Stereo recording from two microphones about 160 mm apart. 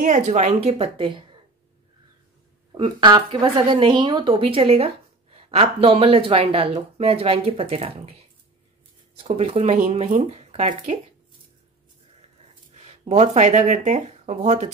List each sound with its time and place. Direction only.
0.0 s a woman's voice: 45° right (ahead or behind)
2.7 s a woman's voice: 30° right (ahead or behind)
9.2 s a woman's voice: 35° right (ahead or behind)
12.7 s speech: 40° right (ahead or behind)